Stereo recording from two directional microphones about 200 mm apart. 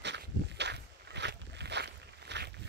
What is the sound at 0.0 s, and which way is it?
Walk, 60° right (ahead or behind).